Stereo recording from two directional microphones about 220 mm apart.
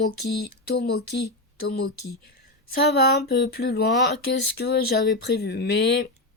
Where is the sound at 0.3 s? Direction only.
45° left (ahead or behind).